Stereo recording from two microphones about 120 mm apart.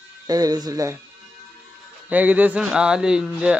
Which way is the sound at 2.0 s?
15° right (ahead or behind).